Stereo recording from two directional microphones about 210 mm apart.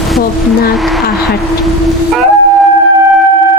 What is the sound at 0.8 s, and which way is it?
Speech, centre (ahead or behind).